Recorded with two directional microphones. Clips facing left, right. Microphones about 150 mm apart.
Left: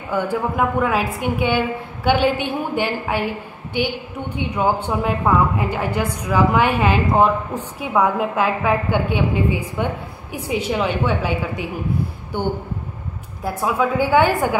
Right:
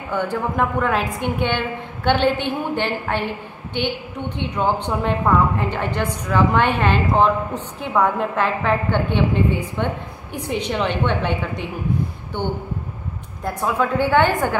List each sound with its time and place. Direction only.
0.1 s a woman's voice: 10° left (ahead or behind)